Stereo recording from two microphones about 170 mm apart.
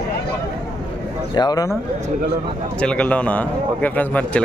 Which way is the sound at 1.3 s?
25° left (ahead or behind).